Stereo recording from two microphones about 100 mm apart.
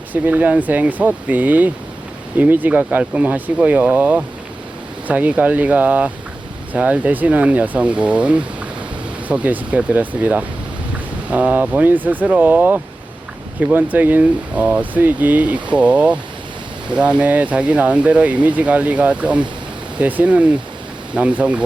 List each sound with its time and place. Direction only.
0.1 s speech: 15° right (ahead or behind)